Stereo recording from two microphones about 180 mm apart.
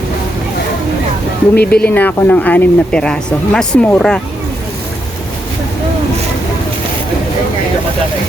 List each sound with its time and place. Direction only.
1.5 s speech: 60° left (ahead or behind)
1.9 s speech: 10° left (ahead or behind)